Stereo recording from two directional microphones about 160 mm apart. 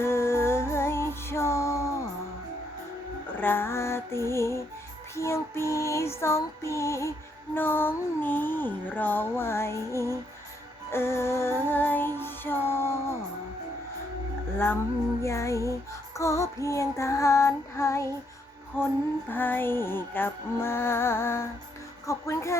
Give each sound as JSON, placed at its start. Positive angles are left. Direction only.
{"t": 0.0, "sound": "music", "side_deg": 15}
{"t": 3.4, "sound": "female singing", "side_deg": 15}
{"t": 5.1, "sound": "child singing", "side_deg": 15}
{"t": 7.5, "sound": "a sound", "side_deg": 15}
{"t": 10.9, "sound": "music", "side_deg": 15}
{"t": 15.2, "sound": "female singing", "side_deg": 20}
{"t": 16.1, "sound": "child singing", "side_deg": 20}
{"t": 18.8, "sound": "music", "side_deg": 10}
{"t": 22.0, "sound": "speech", "side_deg": 20}